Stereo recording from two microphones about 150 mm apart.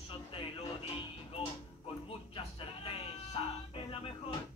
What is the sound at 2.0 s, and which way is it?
Music, 40° left (ahead or behind).